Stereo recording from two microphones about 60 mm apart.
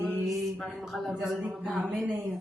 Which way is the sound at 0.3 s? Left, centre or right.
Centre.